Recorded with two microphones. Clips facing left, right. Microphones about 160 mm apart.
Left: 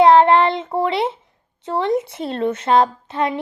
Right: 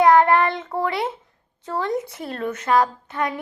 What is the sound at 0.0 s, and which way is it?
Child singing, 25° left (ahead or behind).